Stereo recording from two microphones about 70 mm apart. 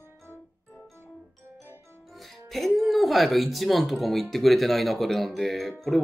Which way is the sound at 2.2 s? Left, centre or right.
Centre.